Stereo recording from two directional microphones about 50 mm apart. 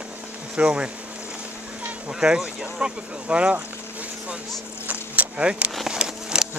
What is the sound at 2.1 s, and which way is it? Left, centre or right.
Speech, centre.